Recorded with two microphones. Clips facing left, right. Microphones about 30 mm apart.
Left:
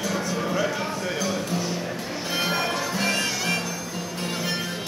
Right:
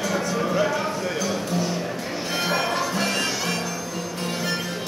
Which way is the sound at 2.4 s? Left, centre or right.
Centre.